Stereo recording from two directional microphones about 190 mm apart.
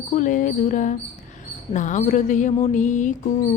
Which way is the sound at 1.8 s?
40° left (ahead or behind).